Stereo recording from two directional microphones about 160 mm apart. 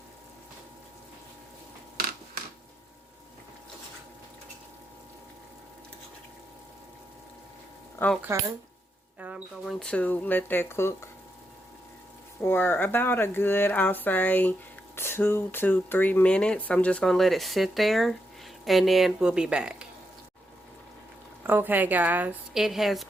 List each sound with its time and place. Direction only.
8.2 s a woman's voice: 15° right (ahead or behind)
9.1 s rodents: 10° right (ahead or behind)
9.6 s speech: 5° left (ahead or behind)
12.4 s a woman's voice: 15° left (ahead or behind); by 19.9 s 5° right (ahead or behind)
21.4 s a woman's voice: 10° right (ahead or behind)